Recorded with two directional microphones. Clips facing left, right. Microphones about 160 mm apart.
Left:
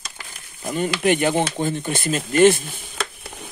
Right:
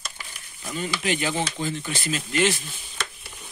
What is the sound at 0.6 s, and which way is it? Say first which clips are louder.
Speech: left 8 dB; 55° left (ahead or behind).